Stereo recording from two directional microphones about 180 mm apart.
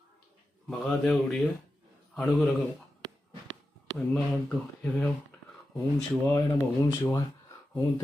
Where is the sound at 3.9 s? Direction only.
5° left (ahead or behind).